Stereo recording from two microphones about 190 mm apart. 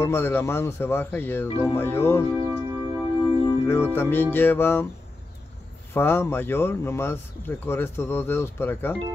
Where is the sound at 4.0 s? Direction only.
10° left (ahead or behind).